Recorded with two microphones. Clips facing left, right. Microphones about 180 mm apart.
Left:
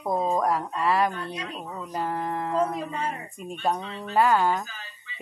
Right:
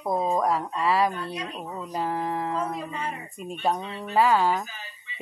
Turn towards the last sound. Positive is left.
turn(degrees=-20)  # may be behind; listen again after turning